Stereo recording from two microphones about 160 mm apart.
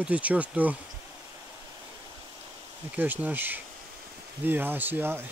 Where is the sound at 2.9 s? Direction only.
10° right (ahead or behind).